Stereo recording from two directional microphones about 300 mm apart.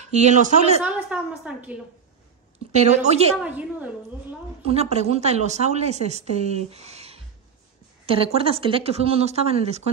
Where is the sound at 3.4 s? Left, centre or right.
Centre.